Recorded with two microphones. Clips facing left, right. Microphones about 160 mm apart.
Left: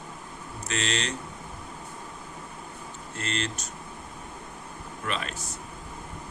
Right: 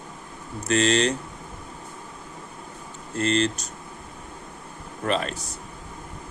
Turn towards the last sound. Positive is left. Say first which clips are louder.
# right 7 dB
turn(degrees=-40)  # may be behind; listen again after turning